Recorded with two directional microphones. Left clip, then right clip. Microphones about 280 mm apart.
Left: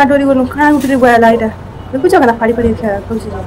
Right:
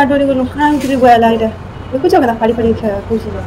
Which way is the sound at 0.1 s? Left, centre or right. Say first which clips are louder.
Left 2 dB; centre.